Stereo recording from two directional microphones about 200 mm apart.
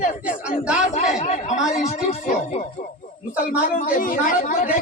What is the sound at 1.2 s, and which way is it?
A man's voice, 35° left (ahead or behind).